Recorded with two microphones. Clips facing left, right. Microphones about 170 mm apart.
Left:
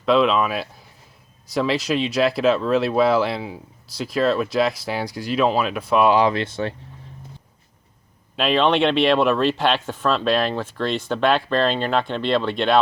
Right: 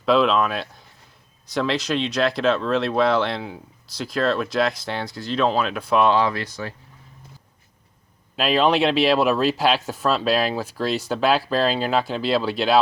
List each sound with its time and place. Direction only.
0.0 s speech: centre (ahead or behind)
6.1 s speech: 20° left (ahead or behind)
8.4 s speech: 5° right (ahead or behind)